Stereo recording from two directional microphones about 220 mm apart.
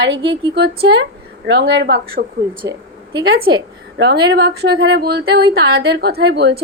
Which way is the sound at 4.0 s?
50° right (ahead or behind).